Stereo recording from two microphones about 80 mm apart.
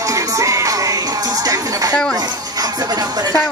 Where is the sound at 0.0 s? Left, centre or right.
Right.